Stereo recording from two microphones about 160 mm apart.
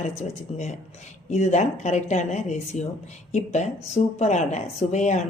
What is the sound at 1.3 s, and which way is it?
A woman's voice, 45° left (ahead or behind).